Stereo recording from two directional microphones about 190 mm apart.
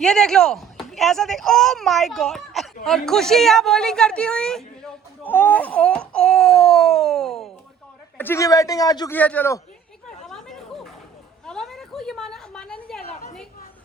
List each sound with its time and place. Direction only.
0.0 s a woman's voice: centre (ahead or behind)
8.2 s a man's voice: 15° left (ahead or behind)
9.1 s a man's voice: 10° left (ahead or behind)
10.2 s a sound: centre (ahead or behind)